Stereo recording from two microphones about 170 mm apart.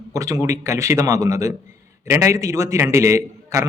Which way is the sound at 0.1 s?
20° right (ahead or behind).